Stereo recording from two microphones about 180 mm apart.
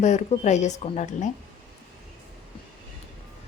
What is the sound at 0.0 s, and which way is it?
A woman's voice, 40° left (ahead or behind).